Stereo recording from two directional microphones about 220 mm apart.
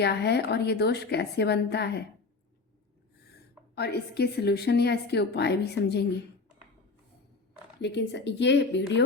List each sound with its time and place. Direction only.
0.0 s a woman's voice: 50° left (ahead or behind)
3.8 s a woman's voice: 45° left (ahead or behind)
7.8 s a woman's voice: 50° left (ahead or behind)